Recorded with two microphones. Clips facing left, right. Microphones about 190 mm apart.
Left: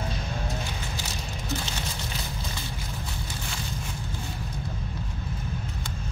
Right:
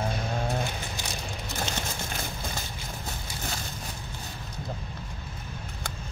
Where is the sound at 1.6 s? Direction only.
50° right (ahead or behind).